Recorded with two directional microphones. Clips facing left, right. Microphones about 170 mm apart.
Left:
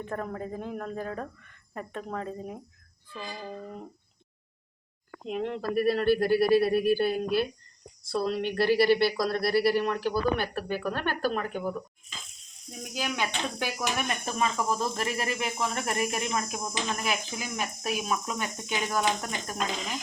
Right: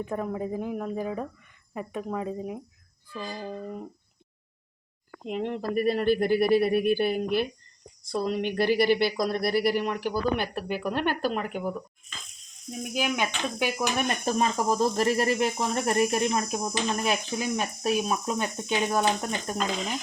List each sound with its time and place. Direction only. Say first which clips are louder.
0.0 s speech: right 4 dB; 10° right (ahead or behind)
5.3 s speech: right 1 dB; 15° right (ahead or behind)
12.8 s speech: right 4 dB; 15° right (ahead or behind)
14.1 s speech: right 4 dB; 35° right (ahead or behind)